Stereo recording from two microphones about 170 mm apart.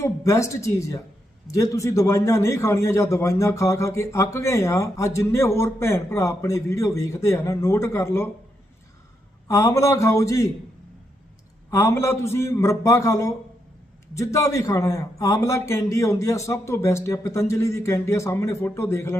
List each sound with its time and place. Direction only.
0.0 s a man's voice: 15° left (ahead or behind)
9.5 s a man's voice: 15° left (ahead or behind)
11.7 s a man's voice: 15° left (ahead or behind)